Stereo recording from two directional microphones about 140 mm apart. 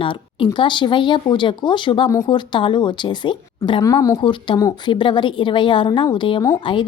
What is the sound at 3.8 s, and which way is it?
Speech, 25° left (ahead or behind).